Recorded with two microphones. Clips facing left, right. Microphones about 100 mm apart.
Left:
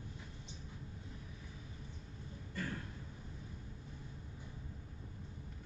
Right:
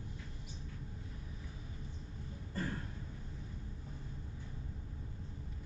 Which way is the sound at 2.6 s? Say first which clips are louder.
Right 3 dB; 35° right (ahead or behind).